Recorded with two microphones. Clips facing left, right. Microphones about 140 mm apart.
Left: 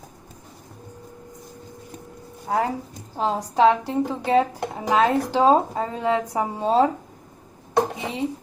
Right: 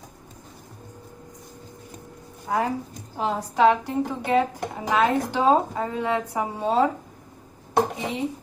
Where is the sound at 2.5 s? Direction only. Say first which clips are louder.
Left 1 dB; 35° left (ahead or behind).